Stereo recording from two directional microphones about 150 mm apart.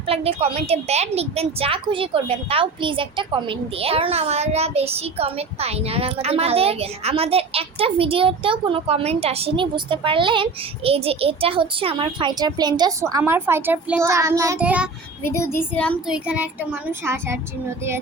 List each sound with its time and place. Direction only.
0.1 s a woman's voice: 40° right (ahead or behind); by 14.0 s 10° right (ahead or behind)
14.0 s child singing: 20° right (ahead or behind)
14.6 s a child's voice: 10° right (ahead or behind)
15.2 s speech: 15° left (ahead or behind)
16.0 s a child's voice: 5° right (ahead or behind)